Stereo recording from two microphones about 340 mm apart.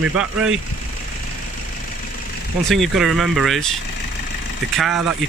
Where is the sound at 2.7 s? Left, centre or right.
Centre.